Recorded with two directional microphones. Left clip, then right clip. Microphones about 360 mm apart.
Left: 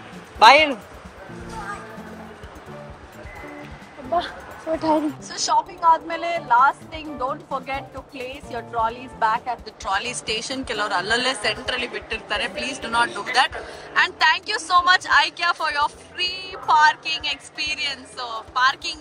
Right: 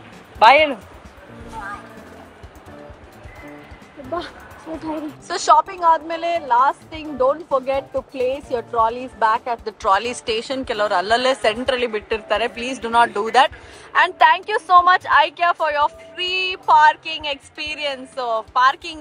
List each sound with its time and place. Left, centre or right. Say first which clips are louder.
0.4 s speech: right 1 dB; centre
5.3 s speech: right 7 dB; centre